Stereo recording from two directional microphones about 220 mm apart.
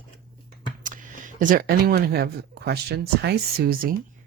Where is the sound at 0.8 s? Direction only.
35° right (ahead or behind).